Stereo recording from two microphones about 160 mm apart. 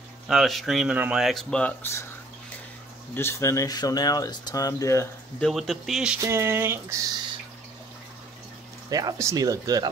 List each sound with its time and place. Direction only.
0.3 s speech: centre (ahead or behind)
3.2 s speech: 15° left (ahead or behind)
5.4 s speech: centre (ahead or behind)
6.2 s speech: 15° right (ahead or behind)
8.9 s speech: 20° right (ahead or behind)